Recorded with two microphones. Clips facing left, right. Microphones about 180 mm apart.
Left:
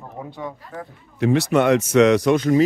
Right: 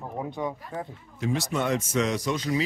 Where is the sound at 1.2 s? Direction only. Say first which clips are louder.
Left 10 dB; 70° left (ahead or behind).